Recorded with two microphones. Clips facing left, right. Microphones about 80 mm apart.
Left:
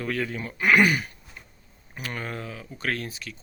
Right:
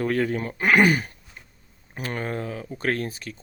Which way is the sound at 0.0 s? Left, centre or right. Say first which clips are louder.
Right 6 dB; right.